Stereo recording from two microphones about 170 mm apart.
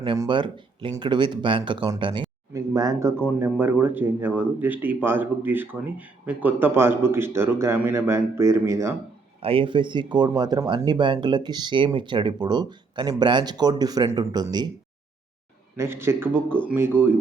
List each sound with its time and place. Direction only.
0.0 s speech: 30° right (ahead or behind)
9.4 s speech: 35° right (ahead or behind)
15.7 s speech: 15° right (ahead or behind)